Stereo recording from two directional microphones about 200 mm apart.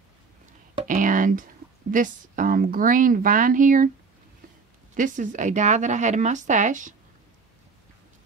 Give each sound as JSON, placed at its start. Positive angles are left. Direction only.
{"t": 0.8, "sound": "a woman's voice", "side_deg": -40}
{"t": 4.9, "sound": "speech", "side_deg": -40}